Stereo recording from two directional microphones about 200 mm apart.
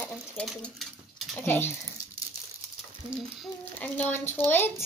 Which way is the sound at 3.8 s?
10° left (ahead or behind).